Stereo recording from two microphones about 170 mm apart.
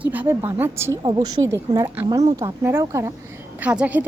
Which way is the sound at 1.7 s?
15° right (ahead or behind).